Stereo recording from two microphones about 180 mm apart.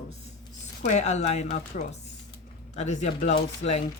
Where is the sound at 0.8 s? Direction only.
40° left (ahead or behind).